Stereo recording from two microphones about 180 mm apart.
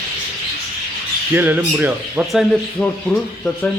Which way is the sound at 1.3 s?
10° right (ahead or behind).